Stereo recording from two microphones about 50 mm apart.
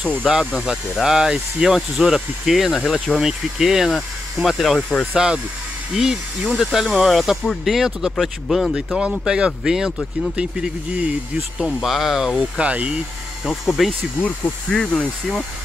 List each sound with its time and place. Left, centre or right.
0.2 s speech: centre
3.2 s speech: centre
5.1 s speech: centre
8.7 s speech: centre
12.4 s speech: right
13.5 s speech: centre
14.7 s speech: centre